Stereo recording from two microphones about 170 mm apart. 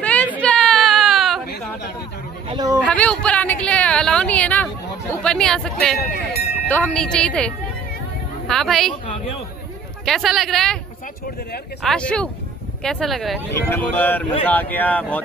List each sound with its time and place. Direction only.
0.4 s a sound: 5° left (ahead or behind)
2.4 s a sound: 25° right (ahead or behind)
2.9 s a sound: 5° left (ahead or behind)
5.2 s speech: 5° left (ahead or behind)
5.9 s speech: 70° left (ahead or behind)
6.7 s speech: 5° left (ahead or behind)
10.0 s speech: centre (ahead or behind)
11.8 s speech: 5° left (ahead or behind)
13.5 s speech: 10° left (ahead or behind)